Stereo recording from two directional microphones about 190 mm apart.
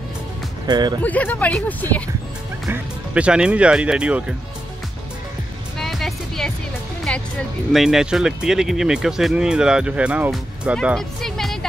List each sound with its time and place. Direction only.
0.7 s speech: 20° right (ahead or behind)
1.0 s speech: 10° left (ahead or behind)
2.7 s speech: 5° right (ahead or behind)
5.8 s music: centre (ahead or behind)
7.1 s speech: 5° left (ahead or behind)